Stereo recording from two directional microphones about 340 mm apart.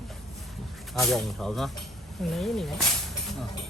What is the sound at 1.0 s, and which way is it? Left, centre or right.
Speech, centre.